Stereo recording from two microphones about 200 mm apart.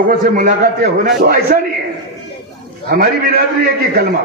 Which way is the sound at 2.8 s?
45° right (ahead or behind).